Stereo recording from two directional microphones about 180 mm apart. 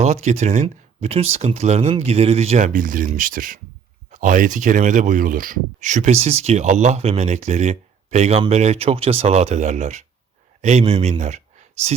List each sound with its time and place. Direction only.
0.0 s speech: 40° right (ahead or behind)